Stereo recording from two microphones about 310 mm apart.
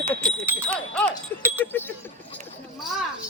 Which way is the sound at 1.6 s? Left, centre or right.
Centre.